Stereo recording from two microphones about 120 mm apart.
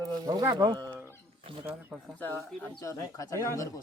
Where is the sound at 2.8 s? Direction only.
25° left (ahead or behind).